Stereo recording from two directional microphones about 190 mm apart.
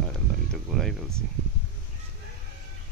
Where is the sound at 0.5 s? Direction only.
Centre (ahead or behind).